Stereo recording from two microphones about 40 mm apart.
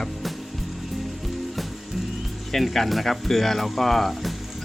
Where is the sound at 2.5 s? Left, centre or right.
Centre.